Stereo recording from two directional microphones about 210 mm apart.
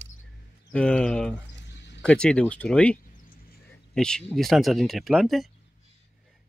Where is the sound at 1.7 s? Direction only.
55° left (ahead or behind).